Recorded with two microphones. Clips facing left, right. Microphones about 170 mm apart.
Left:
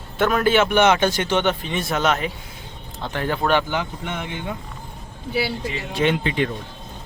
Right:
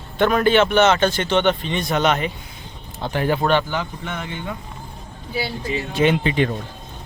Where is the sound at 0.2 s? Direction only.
5° left (ahead or behind).